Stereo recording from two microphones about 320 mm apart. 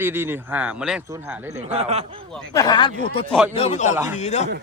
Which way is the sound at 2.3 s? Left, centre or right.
Centre.